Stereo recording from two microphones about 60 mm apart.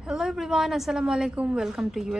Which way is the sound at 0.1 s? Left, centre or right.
Centre.